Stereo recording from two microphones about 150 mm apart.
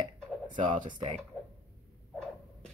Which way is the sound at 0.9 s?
30° right (ahead or behind).